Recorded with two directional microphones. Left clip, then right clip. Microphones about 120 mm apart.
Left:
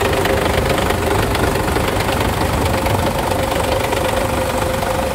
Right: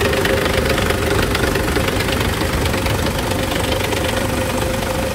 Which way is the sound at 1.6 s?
90° left.